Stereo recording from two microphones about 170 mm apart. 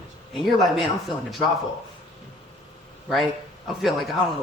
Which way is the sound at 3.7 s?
Centre (ahead or behind).